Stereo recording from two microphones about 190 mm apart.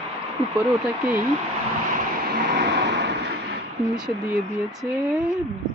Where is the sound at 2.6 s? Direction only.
65° right (ahead or behind).